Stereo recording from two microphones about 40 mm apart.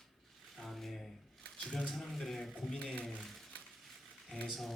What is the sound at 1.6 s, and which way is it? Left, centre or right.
Speech, left.